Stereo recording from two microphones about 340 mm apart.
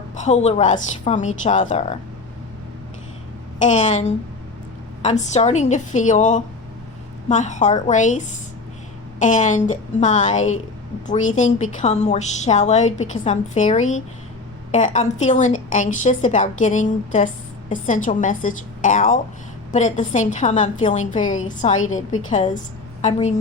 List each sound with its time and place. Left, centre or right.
0.2 s a woman's voice: centre
3.6 s a woman's voice: left